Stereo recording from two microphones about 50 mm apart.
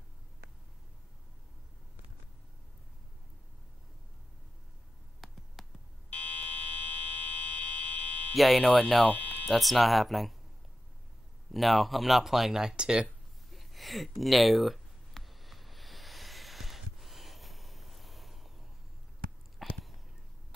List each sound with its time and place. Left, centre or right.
5.2 s a sound: centre
6.0 s fire alarm: left
7.2 s buzzer: left
8.4 s speech: centre
9.1 s music: left
9.5 s speech: centre
11.5 s speech: centre
13.5 s a sound: centre